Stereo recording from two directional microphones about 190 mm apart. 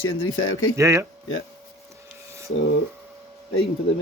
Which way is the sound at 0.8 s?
15° right (ahead or behind).